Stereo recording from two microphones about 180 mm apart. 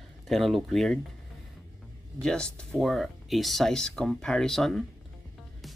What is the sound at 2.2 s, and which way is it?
Speech, 5° left (ahead or behind).